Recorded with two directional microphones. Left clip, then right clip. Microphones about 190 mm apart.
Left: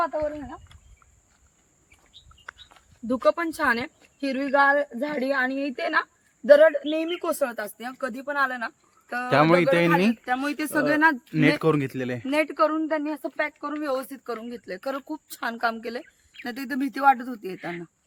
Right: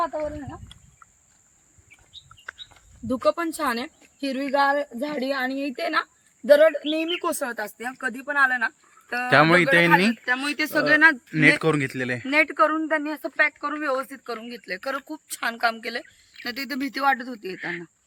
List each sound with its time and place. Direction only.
0.0 s speech: 5° right (ahead or behind)
2.5 s speech: centre (ahead or behind)
6.8 s speech: 15° left (ahead or behind)
7.2 s speech: 40° left (ahead or behind); by 9.2 s 60° left (ahead or behind)
9.3 s speech: centre (ahead or behind)
10.2 s speech: 55° left (ahead or behind)
10.8 s a woman's voice: 40° left (ahead or behind)
11.3 s a woman's voice: centre (ahead or behind); by 17.6 s 50° left (ahead or behind)
17.6 s speech: 10° left (ahead or behind)